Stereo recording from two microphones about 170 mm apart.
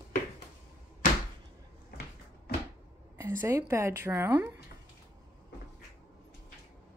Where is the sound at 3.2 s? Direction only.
20° right (ahead or behind).